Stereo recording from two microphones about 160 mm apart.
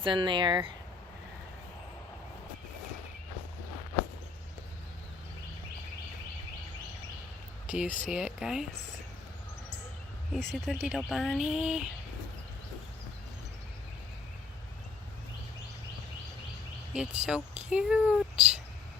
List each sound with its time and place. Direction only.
0.0 s speech: 30° right (ahead or behind)
7.9 s speech: 55° left (ahead or behind)
8.1 s speech: 5° right (ahead or behind)
10.3 s speech: centre (ahead or behind)
16.9 s speech: 5° right (ahead or behind)